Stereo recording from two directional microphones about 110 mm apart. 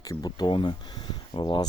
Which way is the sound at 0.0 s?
35° left (ahead or behind).